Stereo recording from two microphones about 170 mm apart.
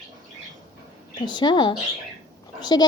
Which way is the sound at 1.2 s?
25° left (ahead or behind).